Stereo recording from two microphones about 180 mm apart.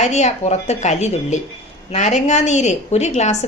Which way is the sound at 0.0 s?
40° left (ahead or behind).